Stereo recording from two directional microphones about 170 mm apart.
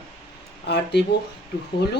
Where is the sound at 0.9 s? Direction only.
85° left.